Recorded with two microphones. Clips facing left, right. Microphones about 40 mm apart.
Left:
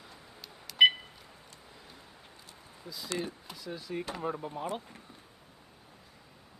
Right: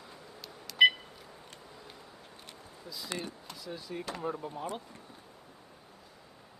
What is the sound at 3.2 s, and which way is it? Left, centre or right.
Speech, centre.